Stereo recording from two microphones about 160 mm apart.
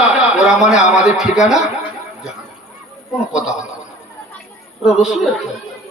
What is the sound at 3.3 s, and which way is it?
Speech, 5° right (ahead or behind).